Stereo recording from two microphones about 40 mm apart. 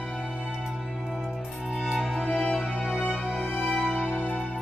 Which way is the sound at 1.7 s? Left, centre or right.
Centre.